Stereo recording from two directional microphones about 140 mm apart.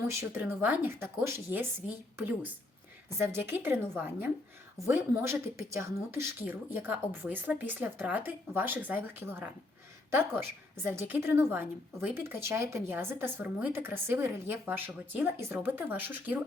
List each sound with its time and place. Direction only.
0.1 s a woman's voice: 20° right (ahead or behind)